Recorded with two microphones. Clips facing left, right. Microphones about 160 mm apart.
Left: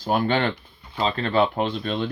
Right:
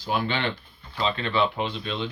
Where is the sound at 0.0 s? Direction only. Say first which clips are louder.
Left 5 dB; 50° left (ahead or behind).